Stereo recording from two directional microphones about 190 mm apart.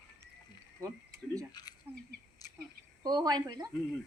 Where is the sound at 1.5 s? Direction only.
20° left (ahead or behind).